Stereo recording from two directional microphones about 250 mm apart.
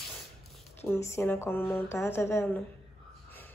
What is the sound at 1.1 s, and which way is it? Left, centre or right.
Speech, centre.